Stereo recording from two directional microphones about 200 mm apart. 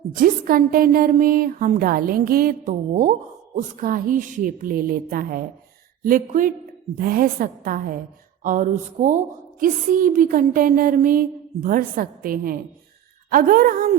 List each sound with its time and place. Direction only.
0.1 s a woman's voice: 45° right (ahead or behind)